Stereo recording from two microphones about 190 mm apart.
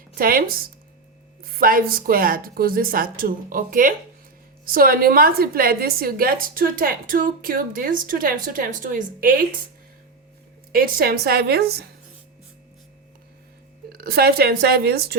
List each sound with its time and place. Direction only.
0.1 s a woman's voice: 50° right (ahead or behind)
10.7 s a woman's voice: 50° right (ahead or behind)
13.9 s a woman's voice: 55° right (ahead or behind)